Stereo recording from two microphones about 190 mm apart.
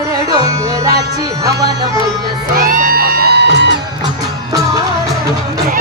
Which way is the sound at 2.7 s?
45° right (ahead or behind).